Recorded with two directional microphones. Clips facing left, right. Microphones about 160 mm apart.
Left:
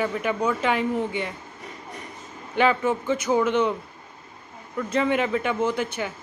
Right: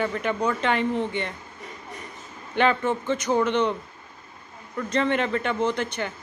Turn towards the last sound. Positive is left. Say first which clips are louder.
# even
turn(degrees=5)  # may be behind; listen again after turning